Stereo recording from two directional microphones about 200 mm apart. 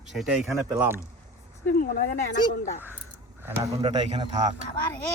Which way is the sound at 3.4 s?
10° right (ahead or behind).